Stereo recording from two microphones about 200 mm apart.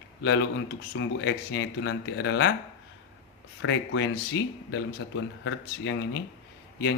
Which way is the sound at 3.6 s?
70° left (ahead or behind).